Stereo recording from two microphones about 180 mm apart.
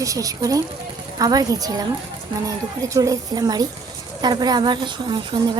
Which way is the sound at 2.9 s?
20° right (ahead or behind).